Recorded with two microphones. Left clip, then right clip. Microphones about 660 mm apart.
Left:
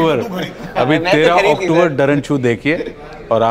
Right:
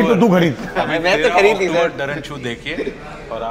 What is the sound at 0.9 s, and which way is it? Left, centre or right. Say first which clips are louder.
Speech: left 2 dB; centre.